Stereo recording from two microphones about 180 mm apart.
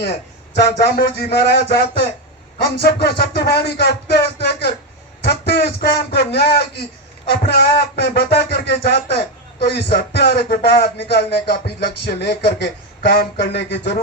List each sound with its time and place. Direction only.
0.8 s speech: 60° left (ahead or behind)